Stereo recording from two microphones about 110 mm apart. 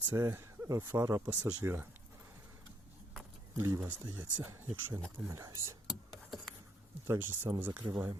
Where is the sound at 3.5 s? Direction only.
25° right (ahead or behind).